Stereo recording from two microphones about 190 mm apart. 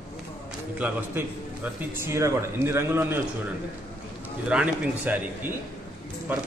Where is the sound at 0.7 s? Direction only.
10° right (ahead or behind).